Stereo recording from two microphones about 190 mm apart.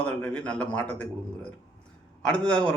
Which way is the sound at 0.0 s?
5° left (ahead or behind).